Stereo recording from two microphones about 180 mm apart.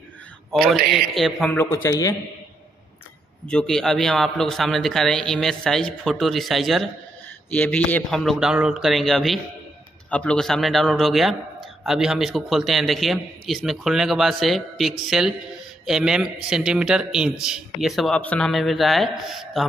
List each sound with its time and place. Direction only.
0.9 s a man's voice: centre (ahead or behind)
1.6 s a man's voice: 15° left (ahead or behind)
3.4 s a man's voice: 5° left (ahead or behind)